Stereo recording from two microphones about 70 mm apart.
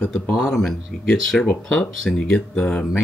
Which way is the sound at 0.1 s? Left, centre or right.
Centre.